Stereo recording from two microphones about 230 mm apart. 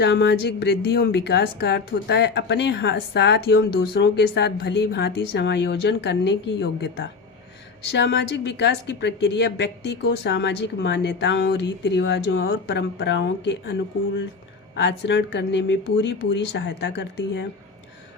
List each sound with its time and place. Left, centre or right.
0.0 s a woman's voice: left
14.8 s a woman's voice: left